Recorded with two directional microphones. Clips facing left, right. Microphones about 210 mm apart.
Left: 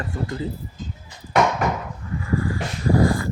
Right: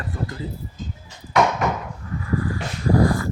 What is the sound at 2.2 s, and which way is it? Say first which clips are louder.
Dog: left 1 dB; 25° left (ahead or behind).